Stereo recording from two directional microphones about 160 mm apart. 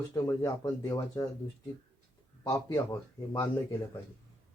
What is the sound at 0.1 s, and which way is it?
Speech, 25° left (ahead or behind).